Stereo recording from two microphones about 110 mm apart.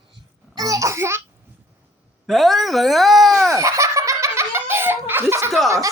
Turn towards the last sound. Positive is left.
turn(degrees=-30)  # may be behind; listen again after turning